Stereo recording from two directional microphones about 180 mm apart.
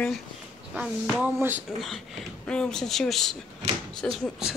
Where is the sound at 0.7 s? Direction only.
5° right (ahead or behind).